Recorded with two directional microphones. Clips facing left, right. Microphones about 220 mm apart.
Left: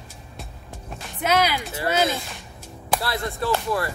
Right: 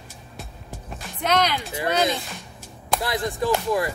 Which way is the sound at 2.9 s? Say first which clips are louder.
Right 2 dB; 15° right (ahead or behind).